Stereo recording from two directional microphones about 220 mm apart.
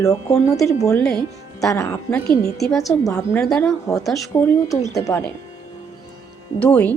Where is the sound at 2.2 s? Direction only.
45° left (ahead or behind).